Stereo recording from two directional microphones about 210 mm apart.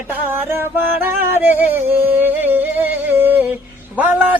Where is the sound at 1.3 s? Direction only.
10° right (ahead or behind).